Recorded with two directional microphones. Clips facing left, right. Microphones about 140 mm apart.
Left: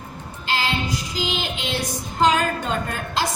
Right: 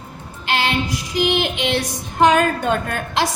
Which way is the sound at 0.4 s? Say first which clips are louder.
Right 4 dB; 70° right (ahead or behind).